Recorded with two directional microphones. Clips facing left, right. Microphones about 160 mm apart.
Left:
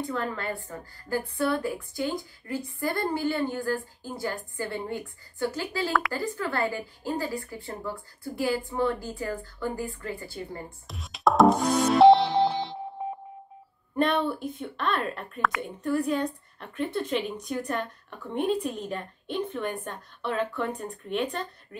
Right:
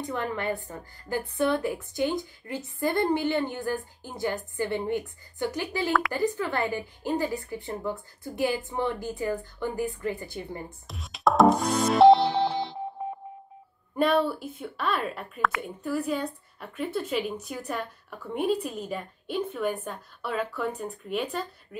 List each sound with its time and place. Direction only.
0.0 s a woman's voice: 20° right (ahead or behind)
10.9 s music: centre (ahead or behind)
13.9 s a woman's voice: 5° right (ahead or behind)